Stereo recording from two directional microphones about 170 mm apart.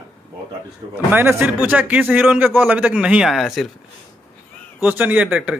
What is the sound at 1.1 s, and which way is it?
A man's voice, 10° right (ahead or behind).